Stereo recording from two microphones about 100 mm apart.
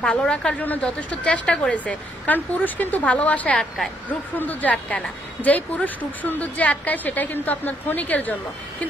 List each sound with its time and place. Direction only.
0.0 s a woman's voice: 10° left (ahead or behind)